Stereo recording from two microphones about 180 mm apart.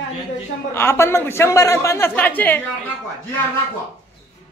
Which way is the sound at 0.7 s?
15° left (ahead or behind).